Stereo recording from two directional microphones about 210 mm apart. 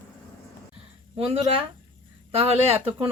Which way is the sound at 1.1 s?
25° right (ahead or behind).